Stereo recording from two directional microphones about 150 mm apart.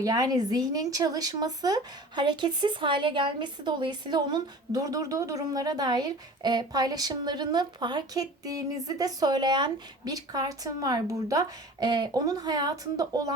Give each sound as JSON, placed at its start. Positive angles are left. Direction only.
{"t": 0.0, "sound": "speech", "side_deg": -25}